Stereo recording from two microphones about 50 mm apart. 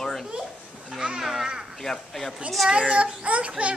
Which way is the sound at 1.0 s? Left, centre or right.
Centre.